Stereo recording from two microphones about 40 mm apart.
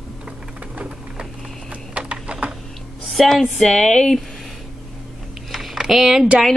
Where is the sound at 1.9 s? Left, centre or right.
Right.